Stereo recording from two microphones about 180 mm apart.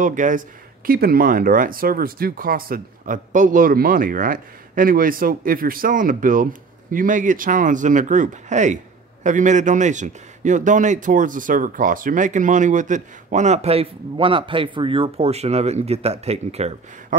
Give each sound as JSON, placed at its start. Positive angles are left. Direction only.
{"t": 0.0, "sound": "a man's voice", "side_deg": -45}
{"t": 0.8, "sound": "a man's voice", "side_deg": -55}